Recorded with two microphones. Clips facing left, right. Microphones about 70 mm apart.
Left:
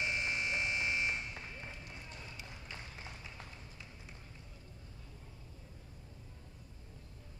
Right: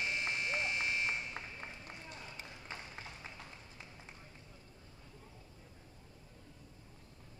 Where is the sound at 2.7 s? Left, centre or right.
Right.